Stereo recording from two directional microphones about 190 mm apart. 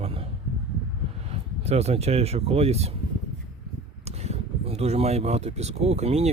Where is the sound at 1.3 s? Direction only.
35° right (ahead or behind).